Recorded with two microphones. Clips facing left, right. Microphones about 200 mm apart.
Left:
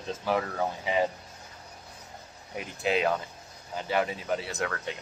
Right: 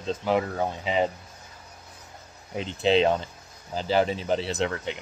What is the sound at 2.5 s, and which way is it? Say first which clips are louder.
Speech: right 6 dB; 25° right (ahead or behind).